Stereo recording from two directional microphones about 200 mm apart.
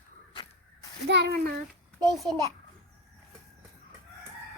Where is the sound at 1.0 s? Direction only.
60° right (ahead or behind).